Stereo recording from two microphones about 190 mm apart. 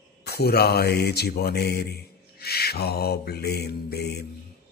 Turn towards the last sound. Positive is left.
turn(degrees=60)  # may be behind; listen again after turning